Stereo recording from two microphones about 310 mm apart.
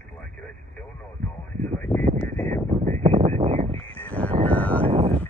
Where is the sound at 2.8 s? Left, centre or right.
Centre.